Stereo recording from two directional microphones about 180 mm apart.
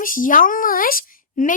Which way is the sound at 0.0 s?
50° left (ahead or behind).